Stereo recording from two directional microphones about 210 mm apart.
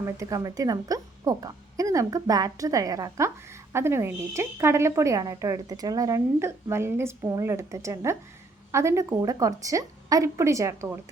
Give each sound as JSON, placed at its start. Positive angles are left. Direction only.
{"t": 0.0, "sound": "speech", "side_deg": -15}